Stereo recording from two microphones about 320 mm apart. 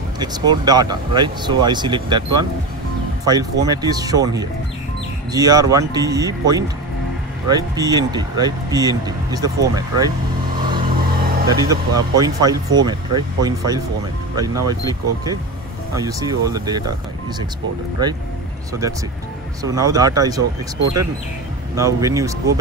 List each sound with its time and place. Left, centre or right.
0.2 s speech: centre
11.1 s a sound: right
11.4 s speech: centre
18.0 s speech: centre